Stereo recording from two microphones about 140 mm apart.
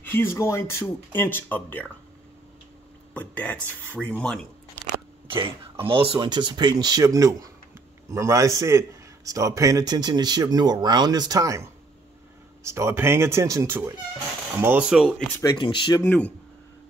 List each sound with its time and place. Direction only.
0.0 s speech: 15° left (ahead or behind)
3.2 s speech: 10° left (ahead or behind)
4.8 s biting: 10° left (ahead or behind)
5.3 s a man's voice: 40° right (ahead or behind); by 15.0 s 5° right (ahead or behind)
15.4 s speech: 35° left (ahead or behind)
16.0 s speech: 15° left (ahead or behind)